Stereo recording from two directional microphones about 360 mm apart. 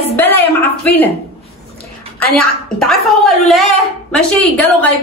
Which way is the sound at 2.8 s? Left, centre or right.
Centre.